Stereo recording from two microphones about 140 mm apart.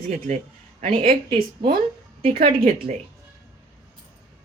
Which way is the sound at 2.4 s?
90° right.